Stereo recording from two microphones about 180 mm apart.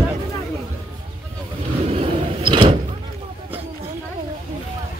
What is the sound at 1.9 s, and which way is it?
Vehicle, 30° right (ahead or behind).